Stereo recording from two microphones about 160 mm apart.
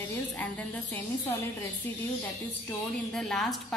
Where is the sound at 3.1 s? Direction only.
5° left (ahead or behind).